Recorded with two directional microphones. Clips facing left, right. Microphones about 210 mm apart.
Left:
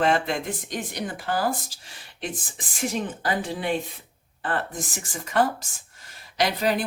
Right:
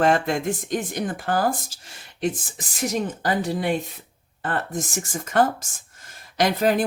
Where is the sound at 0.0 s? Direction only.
45° right (ahead or behind).